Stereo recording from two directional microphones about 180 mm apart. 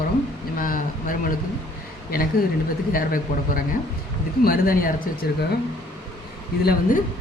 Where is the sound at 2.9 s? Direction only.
50° left (ahead or behind).